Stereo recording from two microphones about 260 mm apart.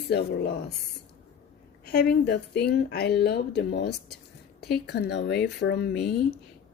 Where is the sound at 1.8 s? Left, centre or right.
Left.